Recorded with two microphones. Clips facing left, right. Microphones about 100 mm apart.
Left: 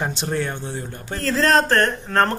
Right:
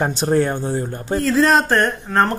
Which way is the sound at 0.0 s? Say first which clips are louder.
Right 7 dB; 40° right (ahead or behind).